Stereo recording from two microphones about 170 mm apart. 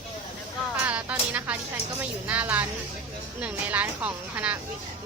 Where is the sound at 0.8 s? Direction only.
10° right (ahead or behind).